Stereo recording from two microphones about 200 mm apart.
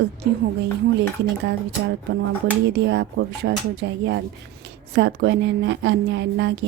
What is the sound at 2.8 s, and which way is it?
A woman's voice, 60° right (ahead or behind).